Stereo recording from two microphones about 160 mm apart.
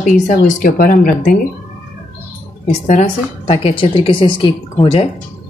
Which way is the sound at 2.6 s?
45° left (ahead or behind).